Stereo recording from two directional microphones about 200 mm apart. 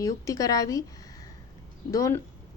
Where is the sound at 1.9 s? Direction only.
15° left (ahead or behind).